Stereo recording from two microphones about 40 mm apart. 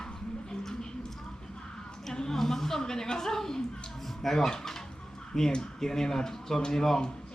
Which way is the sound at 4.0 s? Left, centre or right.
Centre.